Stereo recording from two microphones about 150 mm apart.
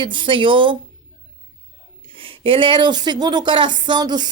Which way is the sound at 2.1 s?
35° right (ahead or behind).